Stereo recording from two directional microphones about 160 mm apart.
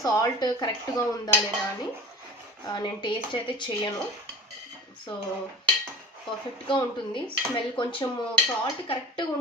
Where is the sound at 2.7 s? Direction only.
30° left (ahead or behind).